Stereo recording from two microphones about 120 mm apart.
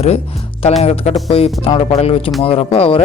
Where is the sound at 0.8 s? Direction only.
60° left (ahead or behind).